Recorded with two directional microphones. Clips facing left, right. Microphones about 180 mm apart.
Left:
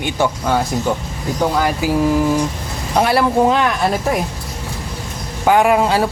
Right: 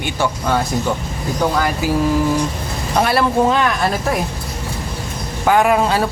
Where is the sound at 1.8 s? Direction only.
15° left (ahead or behind).